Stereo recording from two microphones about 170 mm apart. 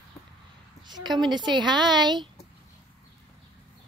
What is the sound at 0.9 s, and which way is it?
A woman's voice, 25° right (ahead or behind).